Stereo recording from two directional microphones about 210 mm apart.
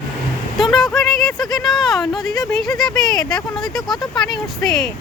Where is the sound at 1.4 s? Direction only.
20° left (ahead or behind).